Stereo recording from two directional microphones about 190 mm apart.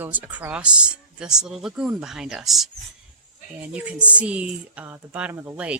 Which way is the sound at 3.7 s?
5° right (ahead or behind).